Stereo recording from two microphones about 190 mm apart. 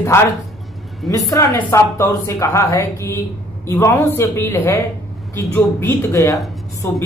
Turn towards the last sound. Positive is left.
turn(degrees=15)  # may be behind; listen again after turning